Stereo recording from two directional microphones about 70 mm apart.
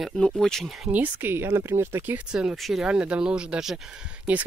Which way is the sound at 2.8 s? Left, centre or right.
Centre.